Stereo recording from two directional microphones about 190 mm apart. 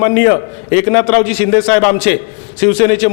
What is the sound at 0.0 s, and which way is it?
A man's voice, 15° left (ahead or behind).